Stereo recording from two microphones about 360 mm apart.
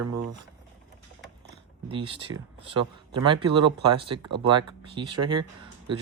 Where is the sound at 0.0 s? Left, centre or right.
Right.